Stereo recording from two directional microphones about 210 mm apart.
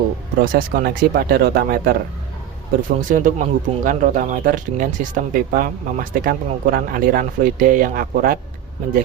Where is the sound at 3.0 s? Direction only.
40° right (ahead or behind).